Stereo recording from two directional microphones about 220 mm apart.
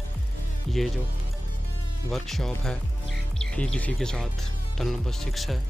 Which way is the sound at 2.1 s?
Centre (ahead or behind).